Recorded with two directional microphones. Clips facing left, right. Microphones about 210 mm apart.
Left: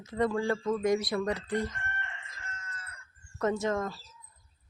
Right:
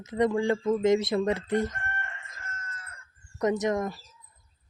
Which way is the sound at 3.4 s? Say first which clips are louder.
Right 3 dB; 20° right (ahead or behind).